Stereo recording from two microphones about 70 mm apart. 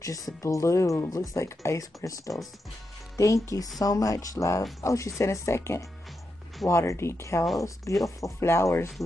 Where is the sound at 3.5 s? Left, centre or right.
Left.